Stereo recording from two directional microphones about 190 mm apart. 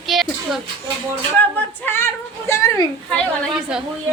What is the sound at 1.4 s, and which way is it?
Female singing, 10° left (ahead or behind).